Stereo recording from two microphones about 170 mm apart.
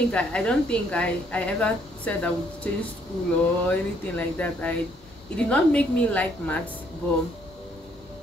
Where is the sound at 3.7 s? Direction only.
10° left (ahead or behind).